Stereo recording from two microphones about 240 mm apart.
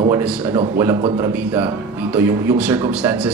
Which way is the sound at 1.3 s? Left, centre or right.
Centre.